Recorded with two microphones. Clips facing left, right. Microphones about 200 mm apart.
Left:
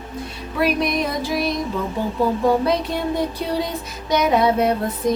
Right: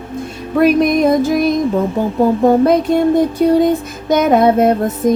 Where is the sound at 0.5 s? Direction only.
50° right (ahead or behind).